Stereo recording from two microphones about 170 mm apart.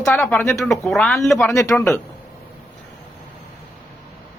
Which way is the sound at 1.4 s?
20° left (ahead or behind).